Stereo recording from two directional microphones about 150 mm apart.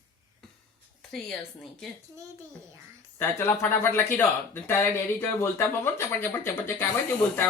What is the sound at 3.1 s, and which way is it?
Speech, 15° left (ahead or behind).